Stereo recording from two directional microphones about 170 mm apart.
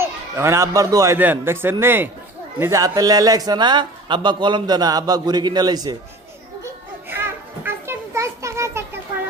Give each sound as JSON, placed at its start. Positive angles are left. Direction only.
{"t": 0.0, "sound": "a man's voice", "side_deg": -15}
{"t": 7.1, "sound": "children playing", "side_deg": -10}